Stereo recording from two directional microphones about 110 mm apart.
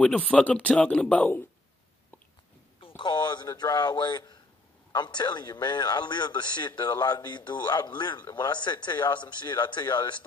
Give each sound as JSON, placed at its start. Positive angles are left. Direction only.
{"t": 0.3, "sound": "speech", "side_deg": 10}
{"t": 3.0, "sound": "a man's voice", "side_deg": 40}